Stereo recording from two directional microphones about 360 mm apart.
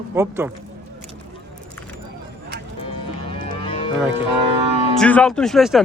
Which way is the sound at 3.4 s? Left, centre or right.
Centre.